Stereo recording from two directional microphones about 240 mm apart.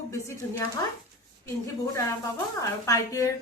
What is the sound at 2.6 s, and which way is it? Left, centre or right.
Speech, centre.